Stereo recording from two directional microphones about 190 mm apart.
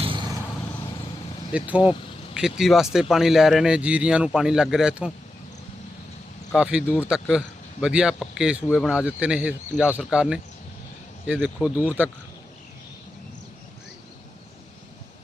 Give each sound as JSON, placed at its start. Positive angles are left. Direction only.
{"t": 0.0, "sound": "vehicle", "side_deg": -25}
{"t": 1.5, "sound": "speech", "side_deg": -5}
{"t": 6.5, "sound": "speech", "side_deg": -5}